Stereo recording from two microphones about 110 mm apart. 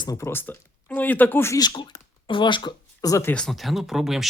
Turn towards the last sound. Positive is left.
turn(degrees=-5)  # may be behind; listen again after turning